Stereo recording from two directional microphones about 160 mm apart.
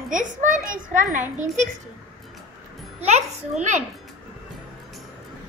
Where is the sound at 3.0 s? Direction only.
45° right (ahead or behind).